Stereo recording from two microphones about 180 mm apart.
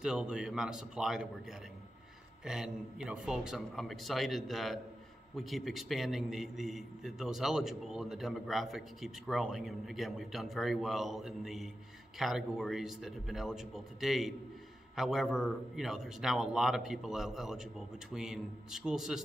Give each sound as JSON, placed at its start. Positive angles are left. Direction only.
{"t": 0.0, "sound": "a man's voice", "side_deg": -5}